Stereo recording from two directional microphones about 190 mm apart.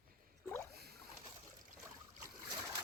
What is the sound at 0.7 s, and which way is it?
Boat, 55° right (ahead or behind).